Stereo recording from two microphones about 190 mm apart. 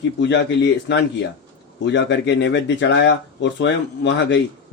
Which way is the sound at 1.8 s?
70° left (ahead or behind).